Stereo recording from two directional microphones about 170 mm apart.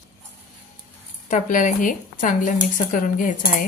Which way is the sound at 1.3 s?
50° left (ahead or behind).